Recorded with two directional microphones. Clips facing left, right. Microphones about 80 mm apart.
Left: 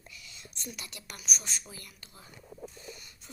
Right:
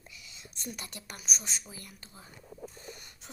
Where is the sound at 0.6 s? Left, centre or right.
Right.